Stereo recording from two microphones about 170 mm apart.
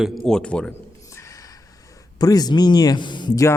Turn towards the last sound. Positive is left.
turn(degrees=20)  # may be behind; listen again after turning